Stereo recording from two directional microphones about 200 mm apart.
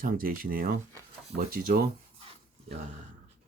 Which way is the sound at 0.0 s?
45° right (ahead or behind).